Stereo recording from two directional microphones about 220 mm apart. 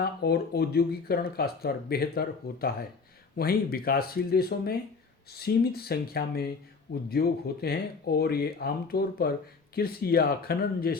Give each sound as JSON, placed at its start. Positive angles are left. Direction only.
{"t": 0.0, "sound": "speech", "side_deg": 45}